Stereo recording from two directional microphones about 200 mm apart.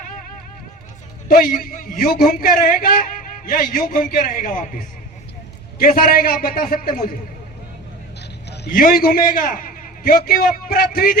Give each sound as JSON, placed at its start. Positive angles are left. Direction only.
{"t": 1.3, "sound": "a man's voice", "side_deg": 45}
{"t": 8.4, "sound": "a man's voice", "side_deg": 50}